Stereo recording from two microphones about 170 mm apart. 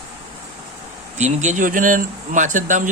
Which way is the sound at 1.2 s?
45° right (ahead or behind).